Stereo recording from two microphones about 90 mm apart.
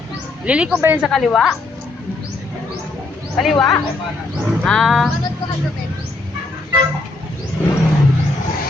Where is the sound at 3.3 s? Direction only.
5° left (ahead or behind).